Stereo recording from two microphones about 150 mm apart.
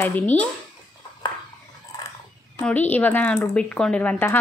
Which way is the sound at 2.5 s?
10° left (ahead or behind).